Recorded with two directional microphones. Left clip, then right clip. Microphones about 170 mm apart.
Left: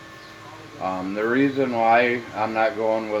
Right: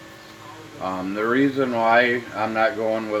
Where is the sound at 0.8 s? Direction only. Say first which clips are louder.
Even; 20° right (ahead or behind).